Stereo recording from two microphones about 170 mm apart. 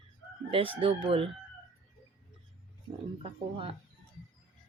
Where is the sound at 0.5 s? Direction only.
30° right (ahead or behind).